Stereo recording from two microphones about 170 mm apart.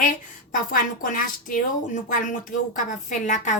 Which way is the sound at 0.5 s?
55° left (ahead or behind).